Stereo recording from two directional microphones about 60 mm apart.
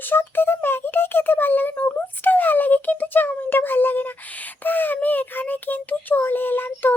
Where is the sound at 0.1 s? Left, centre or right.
Left.